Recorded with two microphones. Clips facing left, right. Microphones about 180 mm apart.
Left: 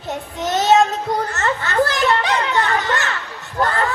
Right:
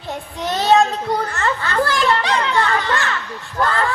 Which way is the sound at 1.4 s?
20° left (ahead or behind).